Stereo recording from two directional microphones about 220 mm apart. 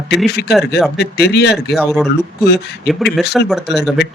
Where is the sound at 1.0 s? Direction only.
50° left (ahead or behind).